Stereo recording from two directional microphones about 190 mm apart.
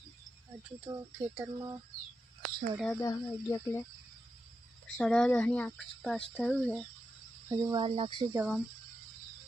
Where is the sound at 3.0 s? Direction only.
15° left (ahead or behind).